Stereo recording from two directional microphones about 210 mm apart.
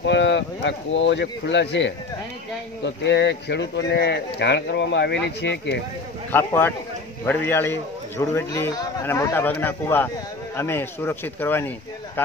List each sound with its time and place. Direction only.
0.0 s speech: 55° left (ahead or behind)
6.3 s a man's voice: 10° left (ahead or behind)